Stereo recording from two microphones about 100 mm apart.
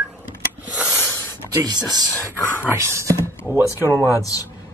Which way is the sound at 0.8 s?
25° left (ahead or behind).